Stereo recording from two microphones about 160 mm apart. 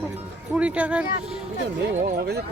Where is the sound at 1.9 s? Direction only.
50° right (ahead or behind).